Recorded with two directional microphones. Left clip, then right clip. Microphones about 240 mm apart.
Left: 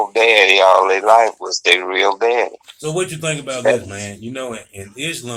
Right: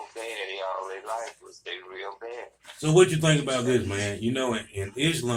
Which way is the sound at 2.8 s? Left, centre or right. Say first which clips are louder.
Right 1 dB; left.